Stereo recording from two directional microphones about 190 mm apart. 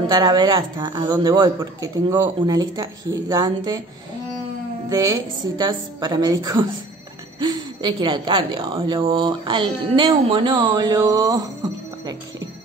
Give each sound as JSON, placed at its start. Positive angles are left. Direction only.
{"t": 0.1, "sound": "speech", "side_deg": -20}
{"t": 4.8, "sound": "speech", "side_deg": -20}